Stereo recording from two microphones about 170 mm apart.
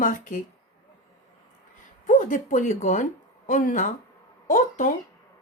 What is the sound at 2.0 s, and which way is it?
Speech, 50° left (ahead or behind).